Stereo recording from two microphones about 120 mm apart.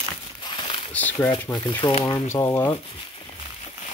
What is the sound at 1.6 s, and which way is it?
Speech, 40° left (ahead or behind).